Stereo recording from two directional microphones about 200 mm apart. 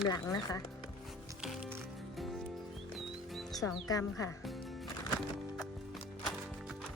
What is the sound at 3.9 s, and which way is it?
Speech, 15° left (ahead or behind).